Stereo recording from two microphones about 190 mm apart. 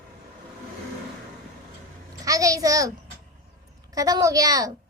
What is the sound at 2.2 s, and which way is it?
Speech, 15° right (ahead or behind).